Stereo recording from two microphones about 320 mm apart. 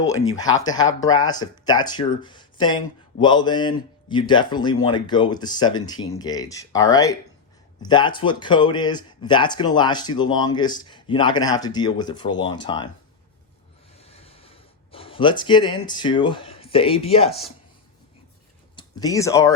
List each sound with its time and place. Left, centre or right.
0.1 s speech: centre
14.0 s a sound: centre
18.8 s speech: centre